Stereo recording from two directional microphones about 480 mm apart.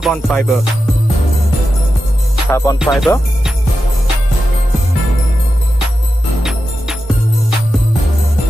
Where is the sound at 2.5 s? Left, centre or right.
Centre.